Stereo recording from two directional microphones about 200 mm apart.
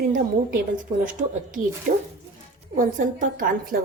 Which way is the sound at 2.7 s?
40° right (ahead or behind).